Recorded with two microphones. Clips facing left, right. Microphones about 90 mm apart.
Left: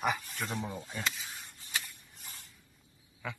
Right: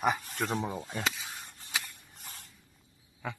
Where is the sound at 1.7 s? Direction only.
70° right (ahead or behind).